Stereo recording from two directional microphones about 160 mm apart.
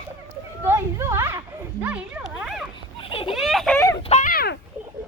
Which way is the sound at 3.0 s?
35° left (ahead or behind).